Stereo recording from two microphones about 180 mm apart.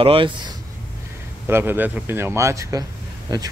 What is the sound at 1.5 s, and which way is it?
Speech, 10° right (ahead or behind).